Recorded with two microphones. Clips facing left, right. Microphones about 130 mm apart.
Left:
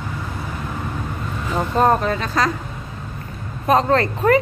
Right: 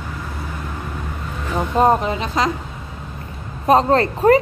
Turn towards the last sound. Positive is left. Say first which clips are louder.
# right 2 dB
turn(degrees=-30)  # may be behind; listen again after turning